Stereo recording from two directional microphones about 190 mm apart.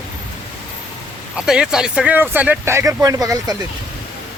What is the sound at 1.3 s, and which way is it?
Speech, 5° right (ahead or behind).